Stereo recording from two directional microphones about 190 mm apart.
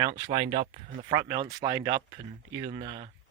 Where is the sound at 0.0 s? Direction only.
30° right (ahead or behind).